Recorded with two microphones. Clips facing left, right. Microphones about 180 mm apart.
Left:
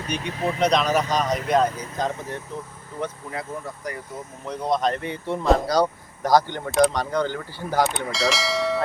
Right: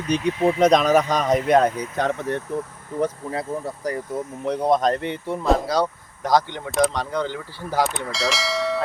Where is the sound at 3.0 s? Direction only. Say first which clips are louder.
Right 6 dB; 35° right (ahead or behind).